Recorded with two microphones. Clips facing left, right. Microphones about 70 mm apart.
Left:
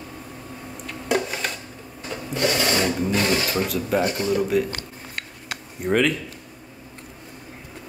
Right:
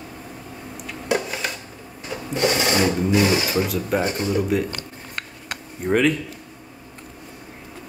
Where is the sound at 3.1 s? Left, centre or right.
Centre.